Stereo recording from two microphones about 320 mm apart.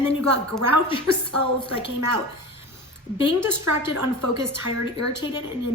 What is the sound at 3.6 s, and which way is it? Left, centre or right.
Speech, right.